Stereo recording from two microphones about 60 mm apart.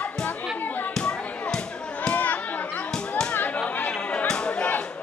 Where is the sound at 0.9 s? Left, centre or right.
Centre.